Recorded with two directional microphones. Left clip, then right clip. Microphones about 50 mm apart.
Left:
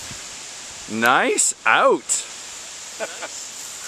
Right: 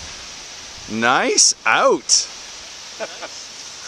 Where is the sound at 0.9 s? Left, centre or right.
Right.